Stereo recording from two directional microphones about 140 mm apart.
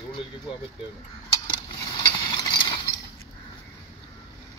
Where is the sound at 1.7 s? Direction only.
30° left (ahead or behind).